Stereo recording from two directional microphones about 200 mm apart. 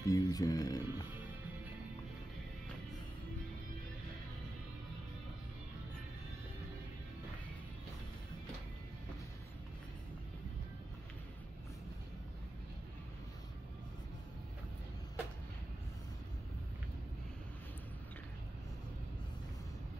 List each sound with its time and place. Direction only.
0.0 s music: 20° left (ahead or behind)